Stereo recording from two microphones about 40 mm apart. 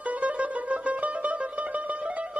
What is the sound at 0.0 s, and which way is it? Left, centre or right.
Mandolin, right.